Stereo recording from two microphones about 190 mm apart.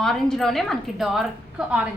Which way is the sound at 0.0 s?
Centre (ahead or behind).